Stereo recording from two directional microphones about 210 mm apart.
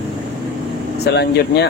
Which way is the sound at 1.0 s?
50° left (ahead or behind).